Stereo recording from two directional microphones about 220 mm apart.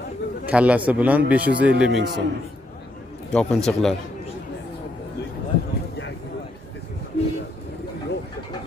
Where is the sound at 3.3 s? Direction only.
5° left (ahead or behind).